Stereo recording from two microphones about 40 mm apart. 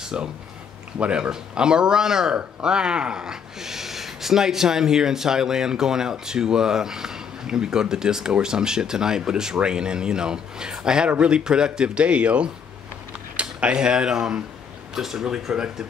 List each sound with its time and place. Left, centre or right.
0.1 s a man's voice: right
11.1 s speech: right
11.3 s a man's voice: right
13.4 s cutlery: right
13.7 s a man's voice: right